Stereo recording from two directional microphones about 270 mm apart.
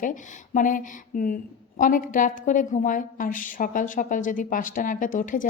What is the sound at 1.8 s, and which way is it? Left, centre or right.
A woman's voice, left.